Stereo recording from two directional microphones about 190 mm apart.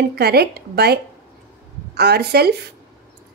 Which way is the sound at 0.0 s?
55° right (ahead or behind).